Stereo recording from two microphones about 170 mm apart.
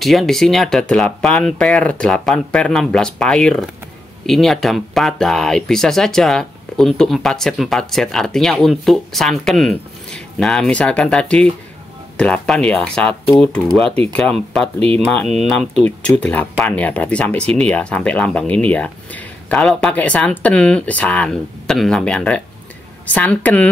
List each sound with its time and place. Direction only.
0.0 s speech: centre (ahead or behind)
14.8 s speech: 35° right (ahead or behind)
15.0 s speech: 5° left (ahead or behind)